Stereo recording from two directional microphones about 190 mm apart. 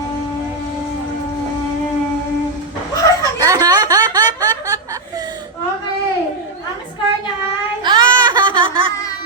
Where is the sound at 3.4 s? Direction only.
20° right (ahead or behind).